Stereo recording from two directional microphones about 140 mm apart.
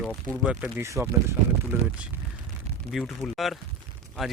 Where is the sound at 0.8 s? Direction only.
20° right (ahead or behind).